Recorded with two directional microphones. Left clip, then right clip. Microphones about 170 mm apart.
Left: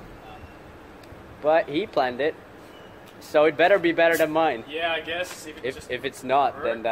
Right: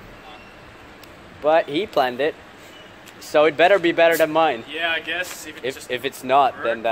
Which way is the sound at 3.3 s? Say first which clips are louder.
Right 3 dB; 50° right (ahead or behind).